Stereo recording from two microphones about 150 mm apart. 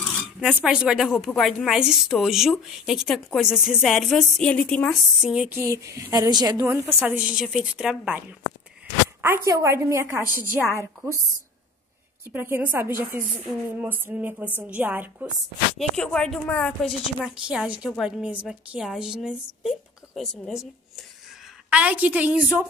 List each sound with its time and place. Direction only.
0.4 s a woman's voice: 10° right (ahead or behind); by 4.9 s 10° left (ahead or behind)
5.2 s a woman's voice: 5° right (ahead or behind)
5.6 s a woman's voice: 20° right (ahead or behind)
12.3 s a woman's voice: 15° right (ahead or behind)
15.8 s a woman's voice: 5° left (ahead or behind)
17.2 s a woman's voice: 5° right (ahead or behind)